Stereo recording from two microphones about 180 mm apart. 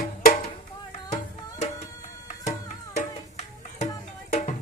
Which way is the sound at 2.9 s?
40° left (ahead or behind).